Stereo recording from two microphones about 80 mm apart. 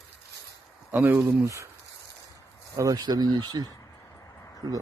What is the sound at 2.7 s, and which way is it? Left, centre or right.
Speech, right.